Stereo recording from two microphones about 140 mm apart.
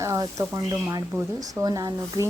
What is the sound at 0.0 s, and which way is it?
Speech, 25° right (ahead or behind).